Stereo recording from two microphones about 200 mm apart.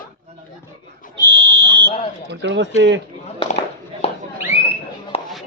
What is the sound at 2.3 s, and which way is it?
Speech, 60° right (ahead or behind).